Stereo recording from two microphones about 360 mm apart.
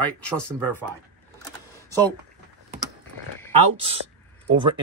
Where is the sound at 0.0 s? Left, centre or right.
Centre.